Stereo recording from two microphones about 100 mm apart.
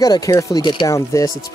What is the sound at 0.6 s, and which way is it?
Speech, 50° left (ahead or behind).